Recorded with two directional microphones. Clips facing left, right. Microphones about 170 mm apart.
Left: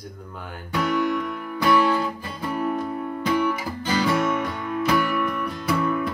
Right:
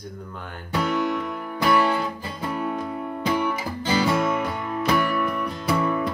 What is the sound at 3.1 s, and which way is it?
Music, 25° right (ahead or behind).